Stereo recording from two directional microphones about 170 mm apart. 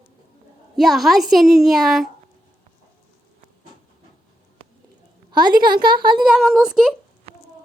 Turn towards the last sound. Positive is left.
turn(degrees=0)  # may be behind; listen again after turning